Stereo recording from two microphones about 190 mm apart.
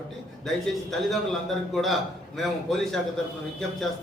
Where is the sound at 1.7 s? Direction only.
Centre (ahead or behind).